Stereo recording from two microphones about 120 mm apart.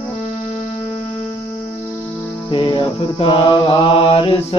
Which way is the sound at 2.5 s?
45° left (ahead or behind).